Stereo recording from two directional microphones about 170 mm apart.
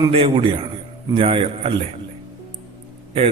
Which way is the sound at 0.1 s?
35° right (ahead or behind).